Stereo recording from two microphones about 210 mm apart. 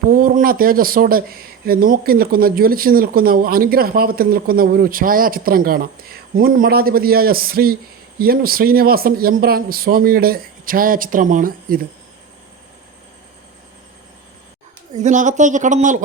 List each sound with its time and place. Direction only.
0.1 s speech: 40° right (ahead or behind)
14.9 s speech: 35° right (ahead or behind)